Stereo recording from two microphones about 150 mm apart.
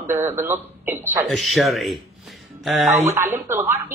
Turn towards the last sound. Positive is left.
turn(degrees=-15)  # may be behind; listen again after turning